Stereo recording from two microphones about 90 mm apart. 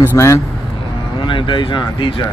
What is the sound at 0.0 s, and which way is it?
Speech, 30° left (ahead or behind).